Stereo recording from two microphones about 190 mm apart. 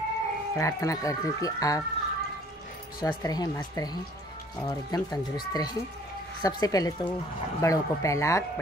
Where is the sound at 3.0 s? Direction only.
20° left (ahead or behind).